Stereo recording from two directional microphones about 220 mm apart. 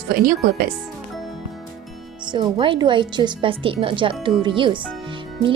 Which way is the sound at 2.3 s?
20° right (ahead or behind).